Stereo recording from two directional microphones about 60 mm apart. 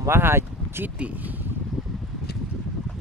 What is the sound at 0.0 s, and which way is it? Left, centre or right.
Speech, right.